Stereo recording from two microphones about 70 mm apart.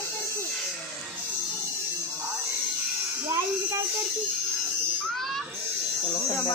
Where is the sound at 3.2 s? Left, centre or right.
Right.